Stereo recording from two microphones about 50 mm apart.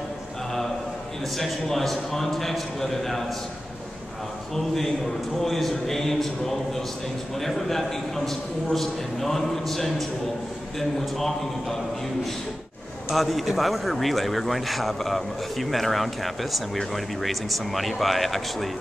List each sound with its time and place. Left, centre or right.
1.4 s speech: centre
4.6 s speech: centre
13.1 s speech: centre